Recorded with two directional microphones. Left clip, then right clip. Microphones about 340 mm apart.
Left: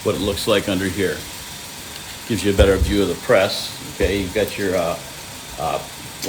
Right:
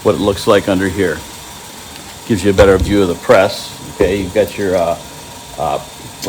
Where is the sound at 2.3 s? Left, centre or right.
Centre.